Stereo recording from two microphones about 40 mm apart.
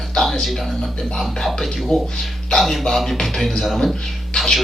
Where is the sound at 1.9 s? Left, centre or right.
Left.